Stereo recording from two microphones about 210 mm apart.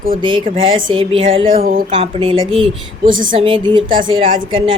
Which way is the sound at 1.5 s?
45° right (ahead or behind).